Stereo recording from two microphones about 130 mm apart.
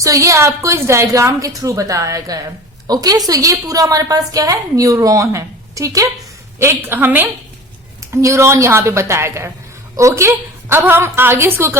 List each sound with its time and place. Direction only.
0.0 s a woman's voice: 25° right (ahead or behind)